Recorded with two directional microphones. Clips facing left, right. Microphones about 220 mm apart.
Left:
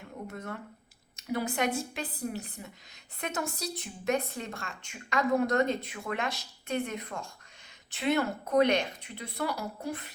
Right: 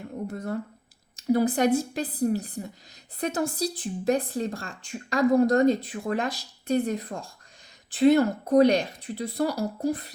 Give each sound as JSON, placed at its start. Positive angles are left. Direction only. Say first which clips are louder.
{"t": 0.3, "sound": "speech", "louder": "right 9 dB", "side_deg": -35}